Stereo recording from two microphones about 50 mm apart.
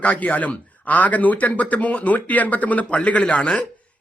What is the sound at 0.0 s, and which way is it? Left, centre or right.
Speech, left.